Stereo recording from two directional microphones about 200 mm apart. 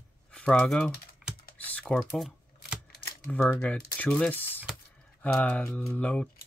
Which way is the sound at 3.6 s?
5° left (ahead or behind).